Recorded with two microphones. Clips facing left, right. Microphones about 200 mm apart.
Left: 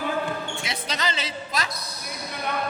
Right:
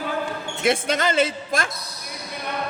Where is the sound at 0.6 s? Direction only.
50° right (ahead or behind).